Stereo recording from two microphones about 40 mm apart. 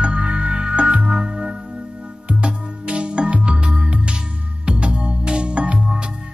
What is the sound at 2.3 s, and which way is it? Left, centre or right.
Music, right.